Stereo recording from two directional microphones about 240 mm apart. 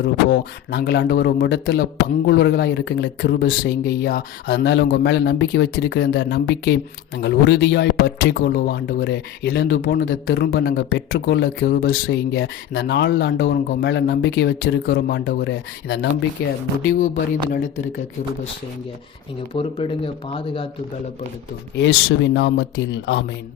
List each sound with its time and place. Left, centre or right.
0.0 s speech: left
19.5 s speech: left
21.8 s speech: left